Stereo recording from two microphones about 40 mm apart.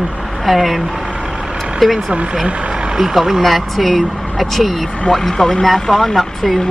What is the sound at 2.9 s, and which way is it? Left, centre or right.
Speech, centre.